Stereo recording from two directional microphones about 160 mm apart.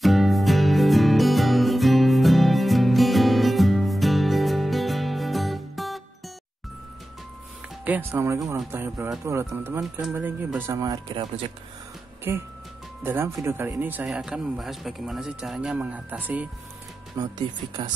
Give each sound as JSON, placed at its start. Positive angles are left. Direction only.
{"t": 0.0, "sound": "music", "side_deg": 0}
{"t": 7.8, "sound": "speech", "side_deg": -10}
{"t": 10.7, "sound": "speech", "side_deg": -25}
{"t": 12.3, "sound": "speech", "side_deg": -15}
{"t": 17.2, "sound": "speech", "side_deg": -25}